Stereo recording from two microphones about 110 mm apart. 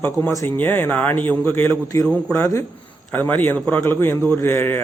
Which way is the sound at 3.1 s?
15° left (ahead or behind).